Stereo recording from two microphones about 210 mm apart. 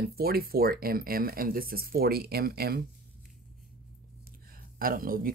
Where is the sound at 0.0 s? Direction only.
45° right (ahead or behind).